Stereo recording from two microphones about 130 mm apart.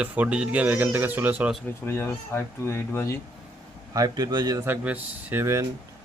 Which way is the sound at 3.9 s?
30° right (ahead or behind).